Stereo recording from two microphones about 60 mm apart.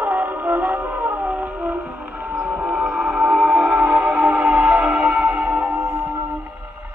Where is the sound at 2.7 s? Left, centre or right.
Centre; by 5.6 s right.